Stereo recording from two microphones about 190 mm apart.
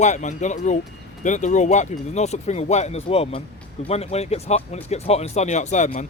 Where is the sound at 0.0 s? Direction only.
40° left (ahead or behind).